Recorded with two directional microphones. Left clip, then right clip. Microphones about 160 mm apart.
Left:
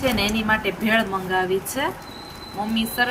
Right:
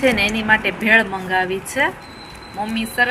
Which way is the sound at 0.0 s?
15° right (ahead or behind).